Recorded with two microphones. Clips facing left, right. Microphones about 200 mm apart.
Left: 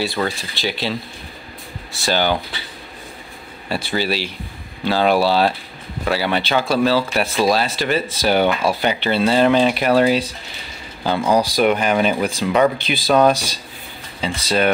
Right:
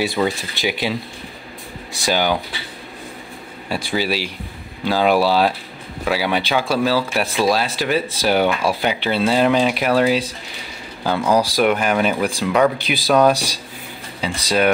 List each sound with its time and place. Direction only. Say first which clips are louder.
0.0 s speech: right 2 dB; 20° right (ahead or behind)
3.6 s speech: even; 10° right (ahead or behind)
11.3 s speech: left 1 dB; 5° right (ahead or behind)